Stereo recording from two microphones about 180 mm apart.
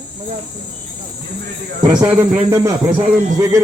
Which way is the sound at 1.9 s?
5° right (ahead or behind).